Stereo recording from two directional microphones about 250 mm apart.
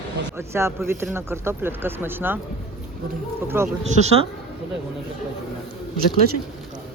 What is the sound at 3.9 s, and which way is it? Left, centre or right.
Speech, right.